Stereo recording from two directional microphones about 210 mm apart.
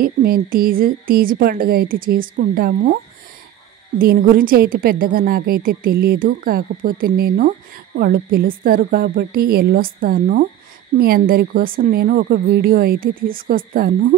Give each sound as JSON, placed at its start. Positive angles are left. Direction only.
{"t": 0.0, "sound": "a woman's voice", "side_deg": -45}
{"t": 4.0, "sound": "a woman's voice", "side_deg": -45}